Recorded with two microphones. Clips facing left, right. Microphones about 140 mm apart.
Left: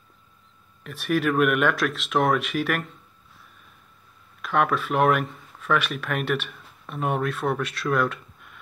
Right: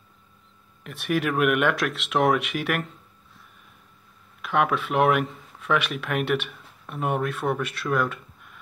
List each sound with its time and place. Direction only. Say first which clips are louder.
0.8 s speech: left 2 dB; 15° right (ahead or behind)
4.4 s speech: even; 15° right (ahead or behind)